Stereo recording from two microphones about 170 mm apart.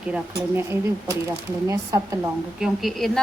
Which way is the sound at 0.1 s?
15° right (ahead or behind).